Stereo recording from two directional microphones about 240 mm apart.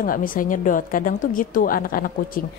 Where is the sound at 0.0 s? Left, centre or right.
Left.